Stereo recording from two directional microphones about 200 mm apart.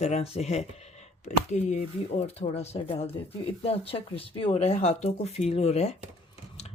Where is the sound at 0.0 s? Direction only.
35° left (ahead or behind).